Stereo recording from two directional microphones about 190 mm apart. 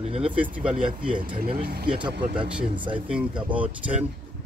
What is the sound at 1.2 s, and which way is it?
Speech, 50° right (ahead or behind).